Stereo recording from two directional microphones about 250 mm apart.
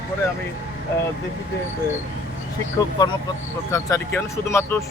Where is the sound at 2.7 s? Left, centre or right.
Centre.